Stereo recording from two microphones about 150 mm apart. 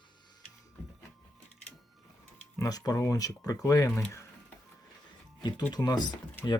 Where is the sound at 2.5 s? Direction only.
25° left (ahead or behind).